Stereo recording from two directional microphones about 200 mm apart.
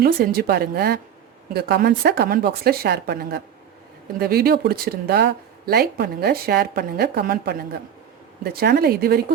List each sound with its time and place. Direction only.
0.0 s speech: 50° right (ahead or behind)